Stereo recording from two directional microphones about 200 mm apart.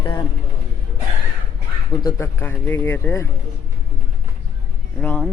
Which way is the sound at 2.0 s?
15° left (ahead or behind).